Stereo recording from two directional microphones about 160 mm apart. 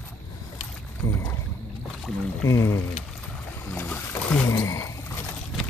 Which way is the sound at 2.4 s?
20° left (ahead or behind).